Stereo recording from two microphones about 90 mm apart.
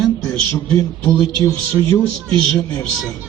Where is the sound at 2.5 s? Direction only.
5° left (ahead or behind).